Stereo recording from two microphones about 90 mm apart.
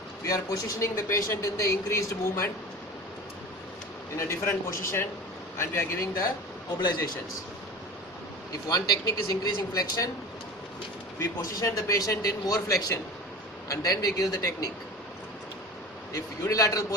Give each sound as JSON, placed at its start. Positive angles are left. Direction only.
{"t": 0.3, "sound": "speech", "side_deg": 40}
{"t": 4.3, "sound": "a man's voice", "side_deg": 30}
{"t": 8.7, "sound": "a man's voice", "side_deg": 45}
{"t": 11.2, "sound": "a man's voice", "side_deg": 35}
{"t": 16.1, "sound": "speech", "side_deg": 35}